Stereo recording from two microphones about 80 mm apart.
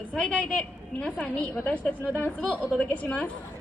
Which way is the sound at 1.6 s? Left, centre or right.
Centre.